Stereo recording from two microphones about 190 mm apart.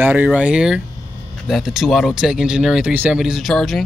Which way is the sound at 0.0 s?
10° right (ahead or behind).